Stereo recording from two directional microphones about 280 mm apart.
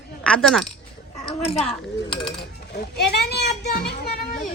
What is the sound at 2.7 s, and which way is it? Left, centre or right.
Children playing, left.